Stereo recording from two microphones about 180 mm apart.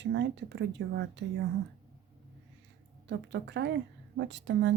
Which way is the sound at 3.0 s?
75° right (ahead or behind).